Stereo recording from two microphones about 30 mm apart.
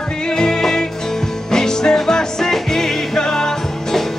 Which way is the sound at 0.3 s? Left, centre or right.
Left.